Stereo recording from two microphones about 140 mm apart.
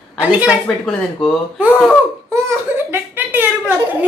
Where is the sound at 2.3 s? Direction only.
20° right (ahead or behind).